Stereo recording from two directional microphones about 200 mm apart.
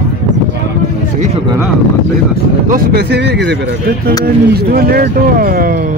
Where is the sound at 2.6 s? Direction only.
45° right (ahead or behind).